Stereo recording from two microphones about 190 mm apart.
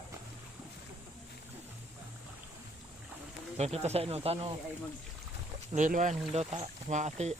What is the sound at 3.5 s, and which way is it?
Speech, 35° right (ahead or behind).